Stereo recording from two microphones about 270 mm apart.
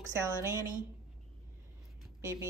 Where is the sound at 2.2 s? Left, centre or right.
Centre.